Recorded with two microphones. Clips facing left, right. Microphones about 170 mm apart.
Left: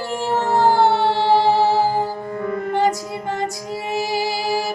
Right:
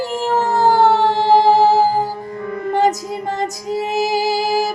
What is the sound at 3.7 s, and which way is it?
Music, 40° right (ahead or behind).